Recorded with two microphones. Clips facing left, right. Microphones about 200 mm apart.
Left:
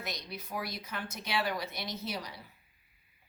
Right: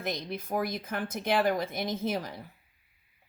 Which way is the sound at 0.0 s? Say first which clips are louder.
Right 7 dB; 50° right (ahead or behind).